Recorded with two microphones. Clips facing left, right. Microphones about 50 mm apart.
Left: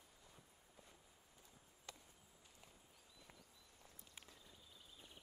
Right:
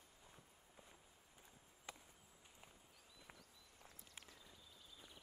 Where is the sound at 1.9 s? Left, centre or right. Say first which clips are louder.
Right 2 dB; right.